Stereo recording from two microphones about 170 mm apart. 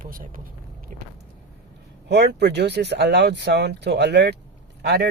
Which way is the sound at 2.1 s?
80° right.